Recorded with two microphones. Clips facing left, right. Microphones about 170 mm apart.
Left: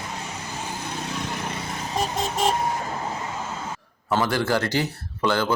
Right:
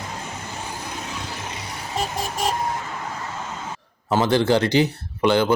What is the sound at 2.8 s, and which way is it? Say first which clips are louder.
Vehicle: left 2 dB; 40° left (ahead or behind).